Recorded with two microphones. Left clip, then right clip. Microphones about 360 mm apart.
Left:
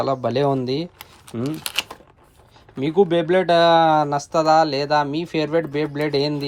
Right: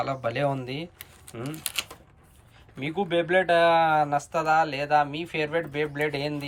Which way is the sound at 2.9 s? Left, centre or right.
Left.